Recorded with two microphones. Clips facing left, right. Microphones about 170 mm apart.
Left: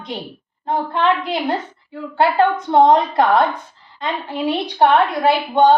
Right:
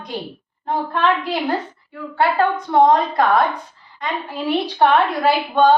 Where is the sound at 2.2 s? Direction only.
25° left (ahead or behind).